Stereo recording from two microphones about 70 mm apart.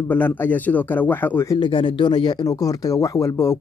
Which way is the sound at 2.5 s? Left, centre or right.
Left.